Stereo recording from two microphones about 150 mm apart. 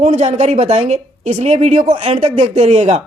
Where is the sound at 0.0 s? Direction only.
50° right (ahead or behind).